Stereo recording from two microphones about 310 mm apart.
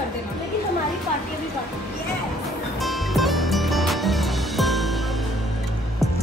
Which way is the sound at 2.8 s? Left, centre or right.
Centre.